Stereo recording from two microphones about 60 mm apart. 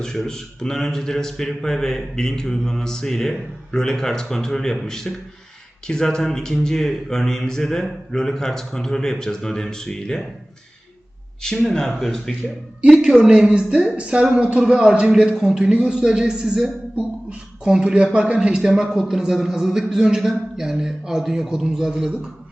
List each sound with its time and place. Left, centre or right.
0.0 s a man's voice: centre
11.4 s a man's voice: centre
11.9 s a man's voice: centre
16.9 s a sound: right
17.7 s a man's voice: centre